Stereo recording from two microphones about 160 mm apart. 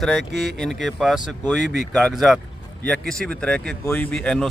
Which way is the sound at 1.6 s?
90° right.